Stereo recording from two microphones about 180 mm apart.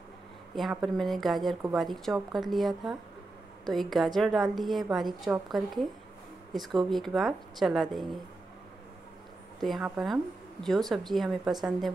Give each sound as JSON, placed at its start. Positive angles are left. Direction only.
{"t": 0.6, "sound": "speech", "side_deg": 0}
{"t": 9.6, "sound": "speech", "side_deg": 0}